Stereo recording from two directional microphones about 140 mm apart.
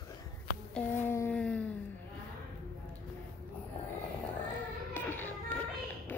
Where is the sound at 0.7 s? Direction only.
15° left (ahead or behind).